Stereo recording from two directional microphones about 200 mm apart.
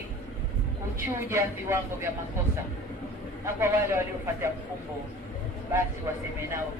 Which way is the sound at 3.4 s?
15° right (ahead or behind).